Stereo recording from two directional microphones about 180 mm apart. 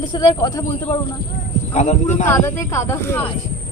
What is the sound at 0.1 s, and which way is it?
Speech, 25° left (ahead or behind).